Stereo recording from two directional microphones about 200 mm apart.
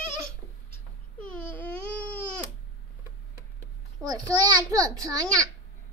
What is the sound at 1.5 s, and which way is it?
Baby cry, 10° left (ahead or behind).